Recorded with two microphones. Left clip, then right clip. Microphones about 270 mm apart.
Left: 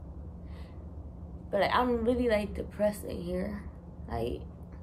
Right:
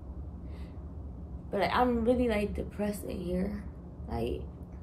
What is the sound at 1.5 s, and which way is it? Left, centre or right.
A woman's voice, centre.